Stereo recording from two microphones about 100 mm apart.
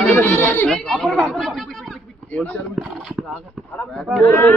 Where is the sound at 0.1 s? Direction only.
20° left (ahead or behind).